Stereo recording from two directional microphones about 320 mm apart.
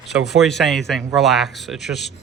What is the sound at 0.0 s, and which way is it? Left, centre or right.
A man's voice, centre.